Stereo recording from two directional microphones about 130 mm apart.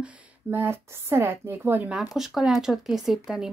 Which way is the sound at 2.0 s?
Centre (ahead or behind).